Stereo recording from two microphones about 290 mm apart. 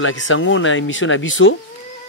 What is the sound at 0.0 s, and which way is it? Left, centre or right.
Speech, left.